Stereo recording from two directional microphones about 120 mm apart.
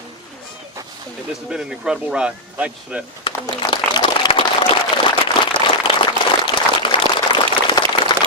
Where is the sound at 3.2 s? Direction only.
45° left (ahead or behind).